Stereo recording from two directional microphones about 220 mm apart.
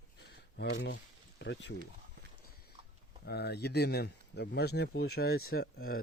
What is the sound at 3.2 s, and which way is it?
Speech, 45° left (ahead or behind).